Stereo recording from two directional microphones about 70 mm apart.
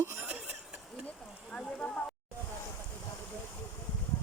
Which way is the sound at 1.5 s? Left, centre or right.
Centre.